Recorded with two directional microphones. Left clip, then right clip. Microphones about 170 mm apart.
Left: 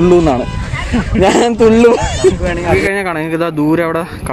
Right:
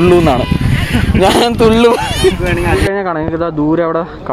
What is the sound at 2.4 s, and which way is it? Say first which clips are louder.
Speech: even; 60° left (ahead or behind).